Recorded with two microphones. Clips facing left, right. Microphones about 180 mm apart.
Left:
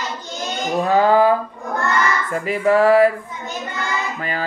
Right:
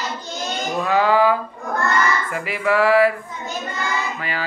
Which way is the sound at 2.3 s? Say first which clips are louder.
Left 5 dB; 40° left (ahead or behind).